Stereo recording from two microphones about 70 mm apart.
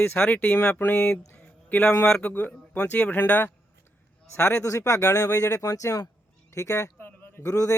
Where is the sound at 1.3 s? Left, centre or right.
Left.